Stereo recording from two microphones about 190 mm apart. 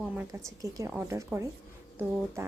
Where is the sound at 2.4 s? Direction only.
15° right (ahead or behind).